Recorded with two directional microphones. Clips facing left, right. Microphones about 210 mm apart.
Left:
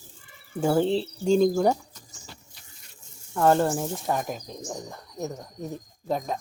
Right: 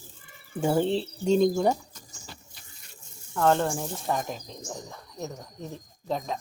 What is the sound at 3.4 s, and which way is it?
Speech, 10° left (ahead or behind).